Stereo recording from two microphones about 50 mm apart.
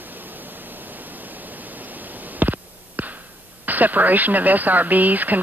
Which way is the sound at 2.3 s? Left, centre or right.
Right.